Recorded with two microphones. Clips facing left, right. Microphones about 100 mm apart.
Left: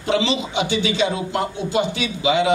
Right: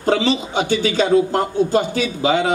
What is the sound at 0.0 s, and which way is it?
Speech, 45° right (ahead or behind).